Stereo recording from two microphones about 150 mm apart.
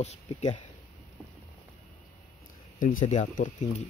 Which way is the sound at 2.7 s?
60° left (ahead or behind).